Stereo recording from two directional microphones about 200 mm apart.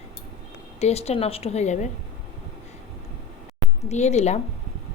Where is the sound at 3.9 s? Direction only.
35° left (ahead or behind).